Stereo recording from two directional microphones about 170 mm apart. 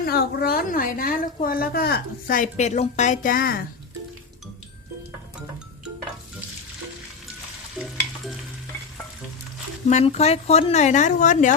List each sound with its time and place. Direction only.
0.0 s a woman's voice: 70° left (ahead or behind)
7.8 s stir: centre (ahead or behind)
9.9 s speech: 40° left (ahead or behind)